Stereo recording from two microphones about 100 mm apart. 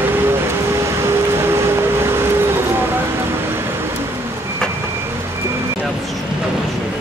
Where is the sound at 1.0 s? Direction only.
25° right (ahead or behind).